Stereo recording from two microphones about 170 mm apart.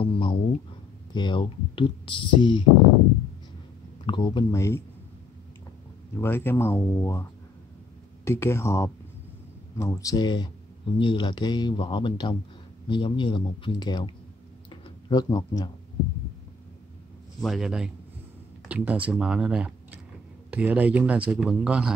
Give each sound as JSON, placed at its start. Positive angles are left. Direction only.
{"t": 0.0, "sound": "a sound", "side_deg": 30}
{"t": 1.1, "sound": "speech", "side_deg": 25}
{"t": 4.0, "sound": "speech", "side_deg": 30}
{"t": 6.1, "sound": "speech", "side_deg": 15}
{"t": 8.3, "sound": "speech", "side_deg": 15}
{"t": 14.7, "sound": "tick-tock", "side_deg": 25}
{"t": 17.4, "sound": "a man's voice", "side_deg": 0}